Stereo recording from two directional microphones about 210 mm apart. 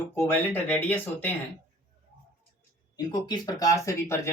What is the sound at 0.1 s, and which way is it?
Speech, 10° left (ahead or behind).